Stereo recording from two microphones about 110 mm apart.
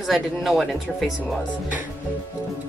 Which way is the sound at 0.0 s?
Centre (ahead or behind).